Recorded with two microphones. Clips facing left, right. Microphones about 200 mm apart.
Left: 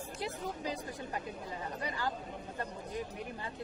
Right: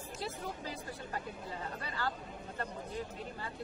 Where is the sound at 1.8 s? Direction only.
15° left (ahead or behind).